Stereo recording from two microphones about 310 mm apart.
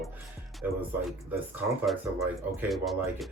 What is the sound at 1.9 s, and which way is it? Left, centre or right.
Speech, centre.